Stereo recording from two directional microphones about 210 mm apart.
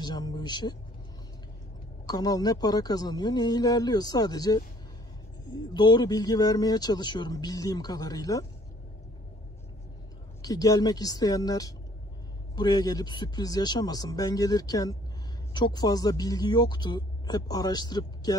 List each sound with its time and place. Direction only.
0.0 s speech: 20° left (ahead or behind)
2.0 s speech: 20° left (ahead or behind)
10.4 s speech: 15° left (ahead or behind)